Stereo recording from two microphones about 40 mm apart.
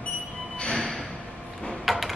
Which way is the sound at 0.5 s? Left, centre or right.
Left.